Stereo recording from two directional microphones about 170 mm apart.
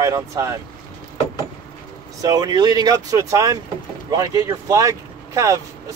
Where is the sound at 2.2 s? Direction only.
25° right (ahead or behind).